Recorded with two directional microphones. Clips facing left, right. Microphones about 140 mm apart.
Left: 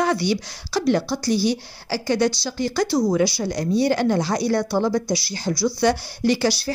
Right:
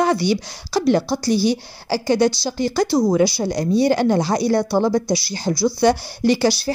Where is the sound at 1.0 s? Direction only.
35° right (ahead or behind).